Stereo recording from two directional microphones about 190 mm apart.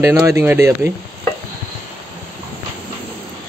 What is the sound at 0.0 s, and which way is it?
Speech, 15° right (ahead or behind).